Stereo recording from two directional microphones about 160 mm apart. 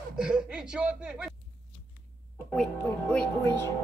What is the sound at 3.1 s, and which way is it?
Speech, 10° left (ahead or behind).